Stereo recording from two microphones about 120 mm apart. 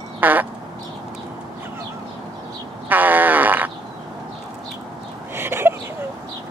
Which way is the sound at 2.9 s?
15° right (ahead or behind).